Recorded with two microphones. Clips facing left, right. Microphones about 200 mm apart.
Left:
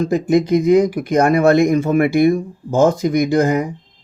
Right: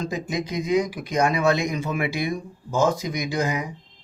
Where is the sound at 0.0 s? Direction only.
60° left (ahead or behind).